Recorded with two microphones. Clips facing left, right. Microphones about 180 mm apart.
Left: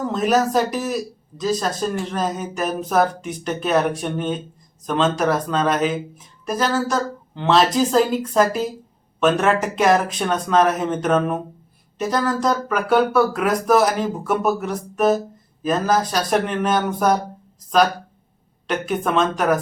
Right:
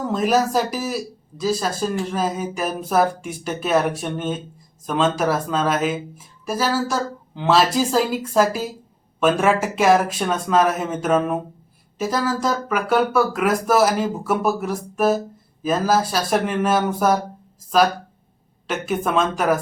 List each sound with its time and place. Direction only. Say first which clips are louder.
0.0 s speech: even; 5° right (ahead or behind)
18.7 s speech: left 1 dB; 5° right (ahead or behind)